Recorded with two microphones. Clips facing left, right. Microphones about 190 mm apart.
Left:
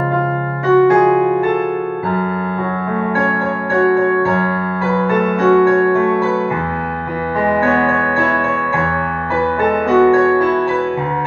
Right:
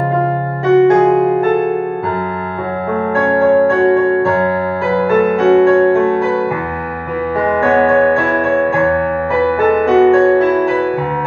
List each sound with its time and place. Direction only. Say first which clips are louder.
0.7 s music: right 2 dB; 20° right (ahead or behind)
3.8 s music: right 2 dB; 20° right (ahead or behind)
5.5 s music: right 2 dB; 20° right (ahead or behind)
9.9 s music: right 1 dB; 20° right (ahead or behind)